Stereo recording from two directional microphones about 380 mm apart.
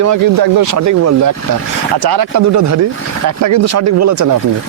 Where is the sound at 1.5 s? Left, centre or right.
Right.